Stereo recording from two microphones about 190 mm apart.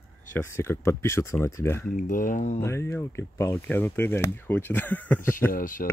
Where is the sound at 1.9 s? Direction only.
45° left (ahead or behind).